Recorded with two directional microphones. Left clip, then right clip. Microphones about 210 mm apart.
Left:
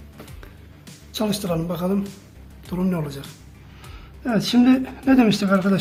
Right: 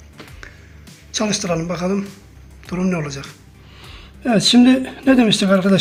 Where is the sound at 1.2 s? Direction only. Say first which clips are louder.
Right 4 dB; 5° right (ahead or behind).